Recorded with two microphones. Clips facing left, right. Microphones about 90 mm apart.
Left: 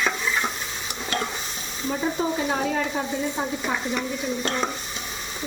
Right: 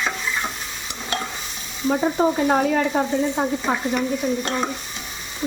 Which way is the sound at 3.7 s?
55° right (ahead or behind).